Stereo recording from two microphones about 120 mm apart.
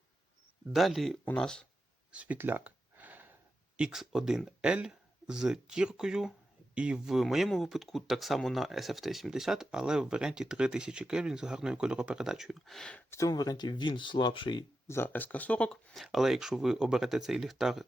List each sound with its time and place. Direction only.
0.7 s speech: centre (ahead or behind)
2.1 s a sound: 15° right (ahead or behind)
3.8 s speech: 5° right (ahead or behind)
13.1 s speech: 25° left (ahead or behind); by 14.6 s 40° left (ahead or behind)
14.8 s speech: 20° left (ahead or behind); by 17.8 s centre (ahead or behind)